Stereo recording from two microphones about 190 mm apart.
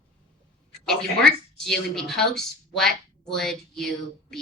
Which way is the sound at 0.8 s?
Centre (ahead or behind).